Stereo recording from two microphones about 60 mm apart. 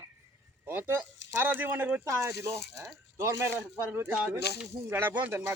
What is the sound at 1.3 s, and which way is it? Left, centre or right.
Speech, right.